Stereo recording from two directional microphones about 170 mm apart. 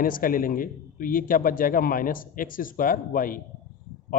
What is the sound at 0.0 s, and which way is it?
A man's voice, 55° left (ahead or behind).